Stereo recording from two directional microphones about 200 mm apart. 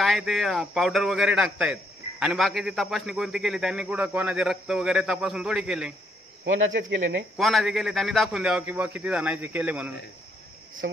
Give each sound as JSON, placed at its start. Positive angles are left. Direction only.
{"t": 0.0, "sound": "a man's voice", "side_deg": 0}
{"t": 6.4, "sound": "speech", "side_deg": -70}
{"t": 7.3, "sound": "a man's voice", "side_deg": 0}